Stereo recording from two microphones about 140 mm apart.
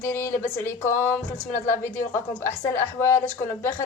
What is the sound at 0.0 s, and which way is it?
Speech, 20° left (ahead or behind).